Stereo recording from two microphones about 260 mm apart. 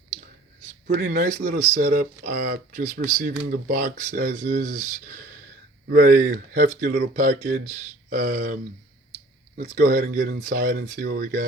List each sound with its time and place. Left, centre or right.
0.7 s speech: right
9.6 s speech: right